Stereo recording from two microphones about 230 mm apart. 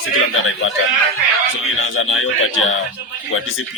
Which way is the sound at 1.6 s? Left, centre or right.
Left.